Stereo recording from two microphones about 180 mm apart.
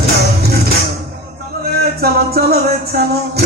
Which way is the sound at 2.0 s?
60° right (ahead or behind).